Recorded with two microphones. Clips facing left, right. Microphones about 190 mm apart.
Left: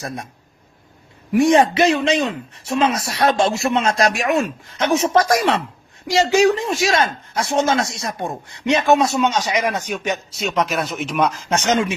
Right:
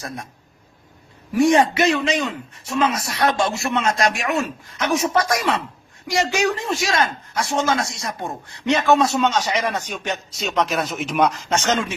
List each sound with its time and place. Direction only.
0.0 s a man's voice: 20° left (ahead or behind)
1.3 s a man's voice: 25° left (ahead or behind)
10.3 s speech: centre (ahead or behind)
11.5 s speech: 15° left (ahead or behind)